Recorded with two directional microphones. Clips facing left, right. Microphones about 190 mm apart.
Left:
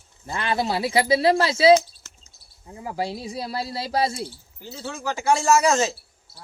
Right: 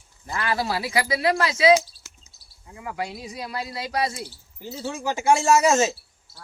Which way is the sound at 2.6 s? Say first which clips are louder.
Left 3 dB; 30° left (ahead or behind).